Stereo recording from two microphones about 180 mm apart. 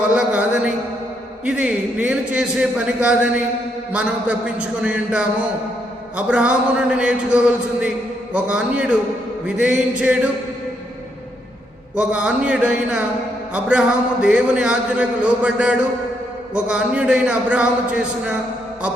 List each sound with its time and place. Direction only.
0.1 s a sound: 5° right (ahead or behind)
1.5 s a man's voice: 5° right (ahead or behind)
11.9 s a man's voice: 5° right (ahead or behind)